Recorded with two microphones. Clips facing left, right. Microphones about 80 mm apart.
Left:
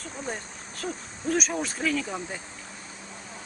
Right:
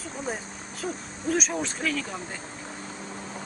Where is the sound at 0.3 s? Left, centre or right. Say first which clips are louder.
Right 2 dB; centre.